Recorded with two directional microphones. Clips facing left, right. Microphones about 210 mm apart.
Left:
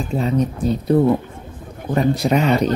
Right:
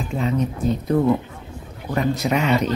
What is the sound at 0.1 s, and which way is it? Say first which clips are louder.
Speech: left 3 dB; 35° left (ahead or behind).